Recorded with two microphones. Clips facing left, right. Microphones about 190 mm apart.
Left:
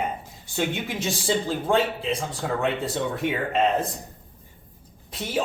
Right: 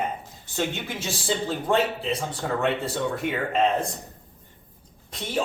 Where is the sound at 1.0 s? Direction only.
Centre (ahead or behind).